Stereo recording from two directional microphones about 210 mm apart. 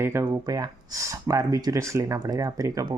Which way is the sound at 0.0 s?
10° right (ahead or behind).